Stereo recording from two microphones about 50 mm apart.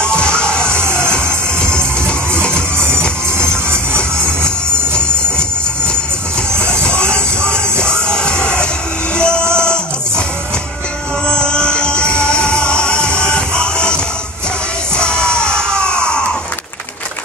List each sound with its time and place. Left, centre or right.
0.0 s music: centre
0.7 s music: right
1.1 s music: centre
6.6 s music: centre
11.2 s music: centre
15.0 s music: centre